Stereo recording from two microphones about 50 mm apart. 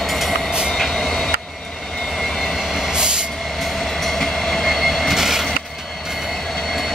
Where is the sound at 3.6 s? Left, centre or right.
Centre.